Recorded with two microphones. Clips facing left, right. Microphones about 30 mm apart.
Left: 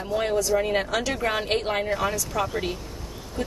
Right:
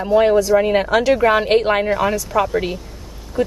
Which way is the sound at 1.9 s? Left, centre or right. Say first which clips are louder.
Right 8 dB; centre.